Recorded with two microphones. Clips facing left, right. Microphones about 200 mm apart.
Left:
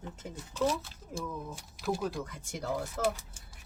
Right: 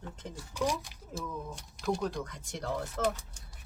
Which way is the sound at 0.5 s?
15° right (ahead or behind).